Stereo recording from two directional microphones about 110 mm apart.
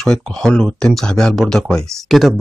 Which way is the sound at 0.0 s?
5° left (ahead or behind).